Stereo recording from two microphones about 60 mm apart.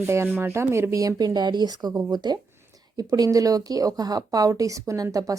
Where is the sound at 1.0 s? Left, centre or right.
Right.